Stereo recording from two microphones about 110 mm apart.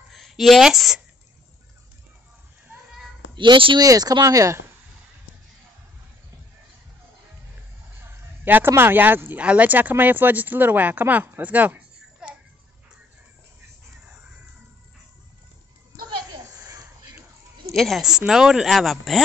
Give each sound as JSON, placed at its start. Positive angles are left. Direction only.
{"t": 0.1, "sound": "a sound", "side_deg": 0}
{"t": 3.3, "sound": "speech", "side_deg": -50}
{"t": 3.8, "sound": "speech", "side_deg": -35}
{"t": 8.5, "sound": "speech", "side_deg": -20}
{"t": 17.7, "sound": "speech", "side_deg": 0}